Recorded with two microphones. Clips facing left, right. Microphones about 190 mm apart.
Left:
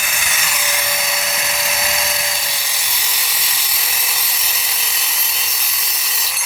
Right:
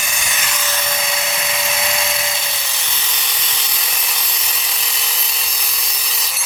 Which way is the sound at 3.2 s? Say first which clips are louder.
Right 1 dB; 5° left (ahead or behind).